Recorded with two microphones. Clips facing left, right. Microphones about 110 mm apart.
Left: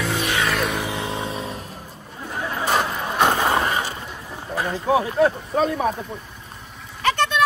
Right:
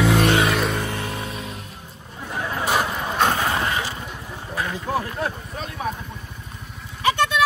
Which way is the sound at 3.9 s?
5° left (ahead or behind).